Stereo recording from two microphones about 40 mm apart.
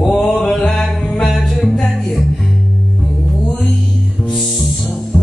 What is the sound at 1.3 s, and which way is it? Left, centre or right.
Music, centre.